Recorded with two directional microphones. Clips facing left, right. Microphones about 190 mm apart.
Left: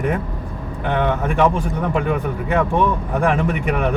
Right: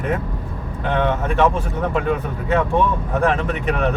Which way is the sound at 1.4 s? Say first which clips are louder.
Left 1 dB; 15° left (ahead or behind).